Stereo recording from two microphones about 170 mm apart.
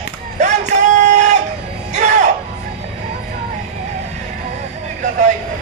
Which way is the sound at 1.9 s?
45° right (ahead or behind).